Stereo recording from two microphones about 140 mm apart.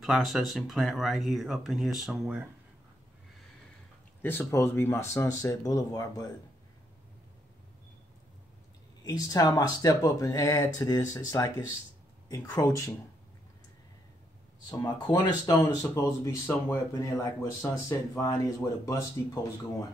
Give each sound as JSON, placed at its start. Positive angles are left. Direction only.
{"t": 0.0, "sound": "speech", "side_deg": 0}
{"t": 4.2, "sound": "speech", "side_deg": 15}
{"t": 9.0, "sound": "speech", "side_deg": 30}
{"t": 14.7, "sound": "speech", "side_deg": 30}